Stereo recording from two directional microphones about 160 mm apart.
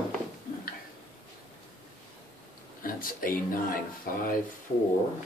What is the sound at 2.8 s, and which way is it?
Speech, 60° left (ahead or behind).